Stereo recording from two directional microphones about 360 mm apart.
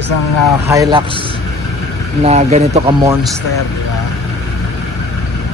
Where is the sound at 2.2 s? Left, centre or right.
Centre.